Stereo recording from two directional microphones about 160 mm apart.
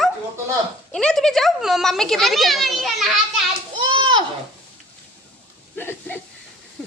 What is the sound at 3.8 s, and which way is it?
Speech, 30° right (ahead or behind).